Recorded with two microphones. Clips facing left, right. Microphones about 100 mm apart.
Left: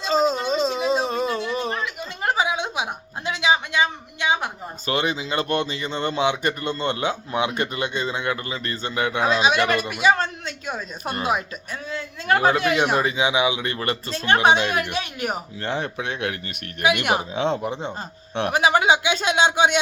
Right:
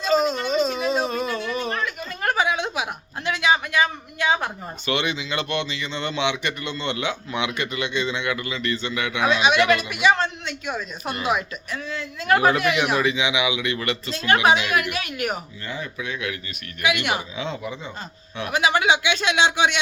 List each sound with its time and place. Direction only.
0.0 s a sound: 30° left (ahead or behind)
1.8 s a sound: 15° left (ahead or behind)
4.9 s a man's voice: 35° left (ahead or behind)
14.7 s a man's voice: 30° left (ahead or behind)
15.6 s speech: 70° left (ahead or behind)
18.5 s a man's voice: 40° left (ahead or behind)